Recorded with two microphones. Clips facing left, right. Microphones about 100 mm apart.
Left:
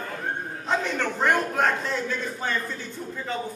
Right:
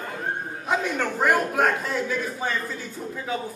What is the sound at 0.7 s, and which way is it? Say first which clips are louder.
A man's voice: right 1 dB; 10° right (ahead or behind).